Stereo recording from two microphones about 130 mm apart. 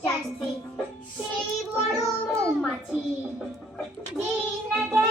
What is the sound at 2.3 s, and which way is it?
Speech, centre (ahead or behind).